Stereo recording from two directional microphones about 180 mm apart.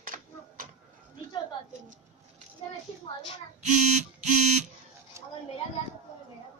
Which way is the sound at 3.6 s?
40° right (ahead or behind).